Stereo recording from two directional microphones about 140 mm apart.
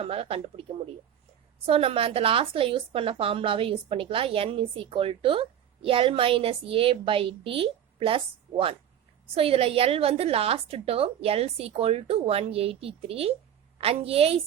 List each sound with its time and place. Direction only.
0.0 s a woman's voice: 45° right (ahead or behind)
1.6 s a woman's voice: 45° right (ahead or behind)